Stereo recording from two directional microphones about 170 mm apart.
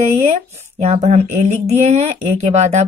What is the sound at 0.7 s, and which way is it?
Speech, 40° right (ahead or behind).